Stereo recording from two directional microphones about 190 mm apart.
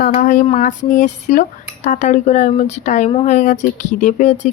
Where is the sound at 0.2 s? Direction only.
45° left (ahead or behind).